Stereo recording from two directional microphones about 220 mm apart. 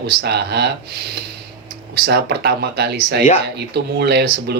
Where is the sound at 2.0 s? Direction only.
45° right (ahead or behind).